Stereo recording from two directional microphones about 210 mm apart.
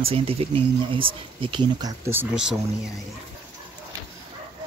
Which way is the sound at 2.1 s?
5° right (ahead or behind).